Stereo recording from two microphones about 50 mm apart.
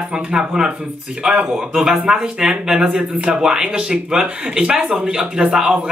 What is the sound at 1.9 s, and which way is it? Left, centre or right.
Speech, centre.